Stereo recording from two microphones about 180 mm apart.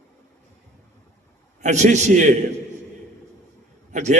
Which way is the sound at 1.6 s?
40° right (ahead or behind).